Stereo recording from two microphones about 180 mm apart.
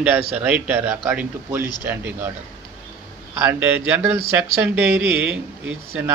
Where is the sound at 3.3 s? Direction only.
10° right (ahead or behind).